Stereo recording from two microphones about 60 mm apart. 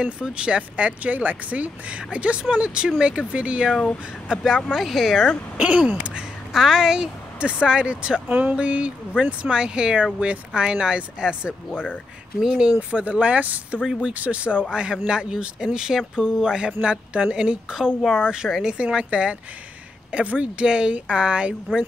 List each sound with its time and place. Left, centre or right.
0.0 s speech: centre
4.7 s speech: centre
5.6 s speech: right
6.5 s speech: centre
11.7 s speech: left
12.4 s speech: centre
12.9 s speech: right